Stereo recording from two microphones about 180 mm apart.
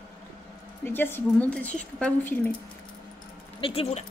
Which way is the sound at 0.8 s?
10° left (ahead or behind).